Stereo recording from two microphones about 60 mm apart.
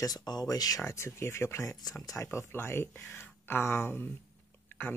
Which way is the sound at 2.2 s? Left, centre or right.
Left.